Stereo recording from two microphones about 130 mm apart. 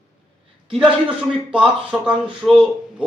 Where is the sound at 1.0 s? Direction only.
10° right (ahead or behind).